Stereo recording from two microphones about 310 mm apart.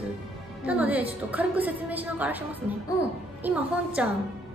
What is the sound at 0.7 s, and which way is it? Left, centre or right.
A woman's voice, centre.